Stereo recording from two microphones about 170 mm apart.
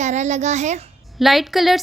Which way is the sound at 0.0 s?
45° right (ahead or behind).